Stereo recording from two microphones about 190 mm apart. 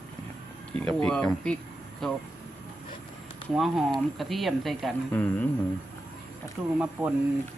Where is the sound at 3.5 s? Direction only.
Centre (ahead or behind).